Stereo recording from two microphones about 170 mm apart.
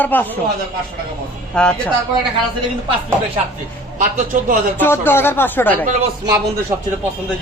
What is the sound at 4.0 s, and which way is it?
Speech, 50° right (ahead or behind).